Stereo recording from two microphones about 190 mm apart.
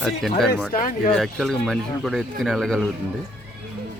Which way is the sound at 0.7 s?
45° left (ahead or behind).